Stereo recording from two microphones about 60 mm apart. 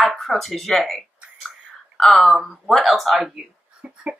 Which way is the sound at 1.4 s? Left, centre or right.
Centre.